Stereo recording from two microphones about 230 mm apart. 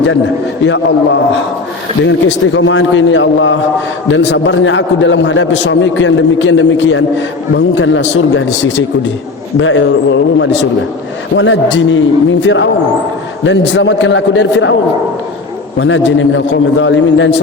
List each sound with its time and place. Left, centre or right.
2.0 s a man's voice: left
15.8 s a man's voice: left